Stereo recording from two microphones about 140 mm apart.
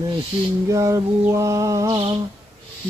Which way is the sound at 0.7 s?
20° right (ahead or behind).